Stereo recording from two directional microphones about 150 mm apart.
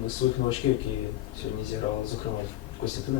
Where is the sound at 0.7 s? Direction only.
35° left (ahead or behind).